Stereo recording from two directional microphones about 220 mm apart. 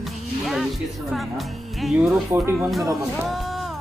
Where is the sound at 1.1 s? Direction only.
Centre (ahead or behind).